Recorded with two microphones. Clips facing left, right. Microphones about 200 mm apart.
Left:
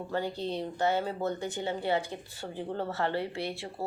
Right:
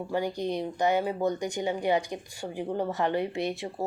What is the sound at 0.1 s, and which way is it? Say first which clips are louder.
A woman's voice: right 3 dB; 15° right (ahead or behind).